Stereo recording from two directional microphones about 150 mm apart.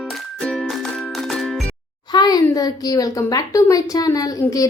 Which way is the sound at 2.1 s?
25° left (ahead or behind).